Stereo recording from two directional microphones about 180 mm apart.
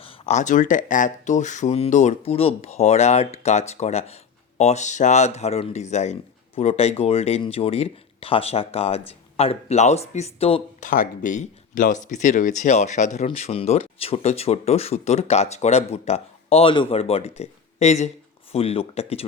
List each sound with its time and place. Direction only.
0.0 s speech: 35° left (ahead or behind)